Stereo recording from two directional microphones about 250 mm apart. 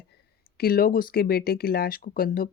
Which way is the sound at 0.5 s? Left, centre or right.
Left.